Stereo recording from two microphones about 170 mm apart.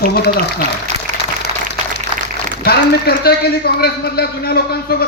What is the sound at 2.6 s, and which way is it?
A man's voice, 65° left (ahead or behind).